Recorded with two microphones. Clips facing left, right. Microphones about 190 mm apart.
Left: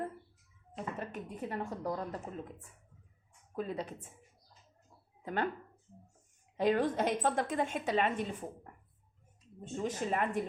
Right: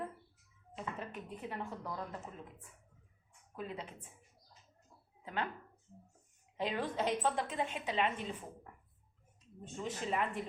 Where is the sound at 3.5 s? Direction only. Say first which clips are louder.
Left 6 dB; 40° left (ahead or behind).